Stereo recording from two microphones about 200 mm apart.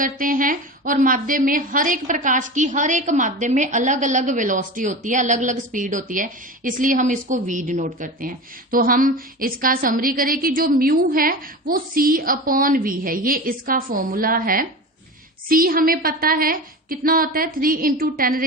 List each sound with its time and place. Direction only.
0.0 s a woman's voice: 45° right (ahead or behind)